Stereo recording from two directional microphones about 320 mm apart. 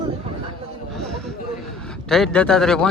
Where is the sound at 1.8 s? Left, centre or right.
Centre.